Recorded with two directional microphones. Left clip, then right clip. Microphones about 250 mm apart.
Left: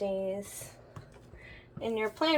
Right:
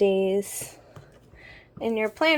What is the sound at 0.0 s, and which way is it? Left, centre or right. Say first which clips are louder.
Speech: right 11 dB; right.